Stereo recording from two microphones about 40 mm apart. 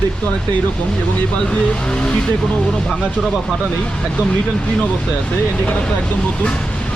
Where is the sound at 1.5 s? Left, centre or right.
Left.